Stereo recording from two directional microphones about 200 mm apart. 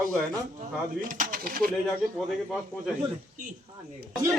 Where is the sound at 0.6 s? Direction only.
40° right (ahead or behind).